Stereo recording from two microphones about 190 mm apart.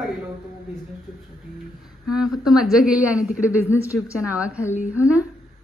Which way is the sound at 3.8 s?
15° left (ahead or behind).